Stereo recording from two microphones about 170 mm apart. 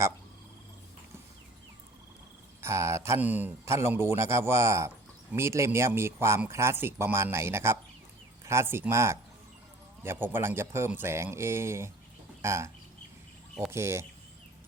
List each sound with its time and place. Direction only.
2.6 s speech: 15° right (ahead or behind)